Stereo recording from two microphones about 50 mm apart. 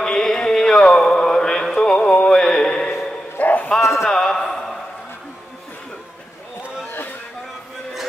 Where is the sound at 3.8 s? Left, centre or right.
Left.